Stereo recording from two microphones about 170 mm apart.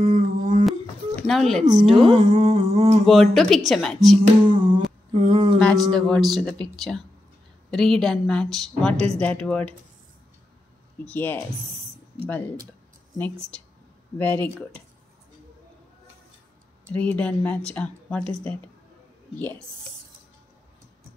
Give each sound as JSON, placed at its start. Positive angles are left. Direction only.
{"t": 0.0, "sound": "a sound", "side_deg": -40}
{"t": 0.7, "sound": "a sound", "side_deg": 0}
{"t": 1.6, "sound": "a woman's voice", "side_deg": -45}
{"t": 2.0, "sound": "humming", "side_deg": -30}
{"t": 3.1, "sound": "a woman's voice", "side_deg": 0}
{"t": 5.1, "sound": "humming", "side_deg": -40}
{"t": 5.6, "sound": "a woman's voice", "side_deg": 5}
{"t": 8.9, "sound": "humming", "side_deg": -40}
{"t": 9.2, "sound": "speech", "side_deg": 5}
{"t": 11.1, "sound": "speech", "side_deg": 10}
{"t": 14.1, "sound": "speech", "side_deg": 10}
{"t": 16.9, "sound": "speech", "side_deg": 5}